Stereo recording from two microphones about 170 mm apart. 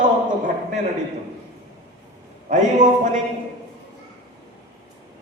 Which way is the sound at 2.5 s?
50° right (ahead or behind).